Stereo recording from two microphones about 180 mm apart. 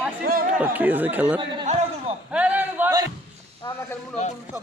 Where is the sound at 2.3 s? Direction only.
10° right (ahead or behind).